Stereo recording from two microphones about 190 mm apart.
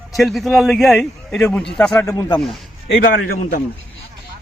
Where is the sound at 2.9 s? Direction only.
45° left (ahead or behind).